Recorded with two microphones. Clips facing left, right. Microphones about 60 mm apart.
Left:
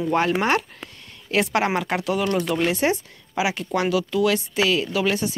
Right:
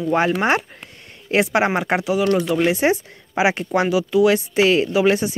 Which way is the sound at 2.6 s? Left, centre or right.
Centre.